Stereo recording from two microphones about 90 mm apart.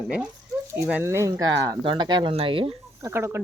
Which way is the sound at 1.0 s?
30° right (ahead or behind).